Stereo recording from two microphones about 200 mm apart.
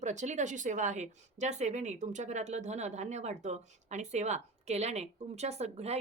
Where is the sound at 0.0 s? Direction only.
35° right (ahead or behind).